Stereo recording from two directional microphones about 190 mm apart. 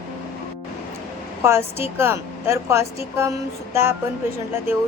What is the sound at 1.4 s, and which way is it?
A woman's voice, 15° right (ahead or behind).